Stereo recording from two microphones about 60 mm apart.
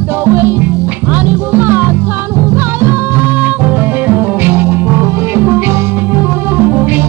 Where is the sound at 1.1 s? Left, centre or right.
Right.